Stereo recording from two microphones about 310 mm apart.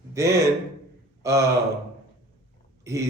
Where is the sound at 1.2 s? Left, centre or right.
Centre.